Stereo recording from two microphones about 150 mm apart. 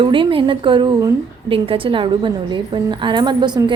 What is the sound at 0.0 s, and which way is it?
A woman's voice, 35° right (ahead or behind).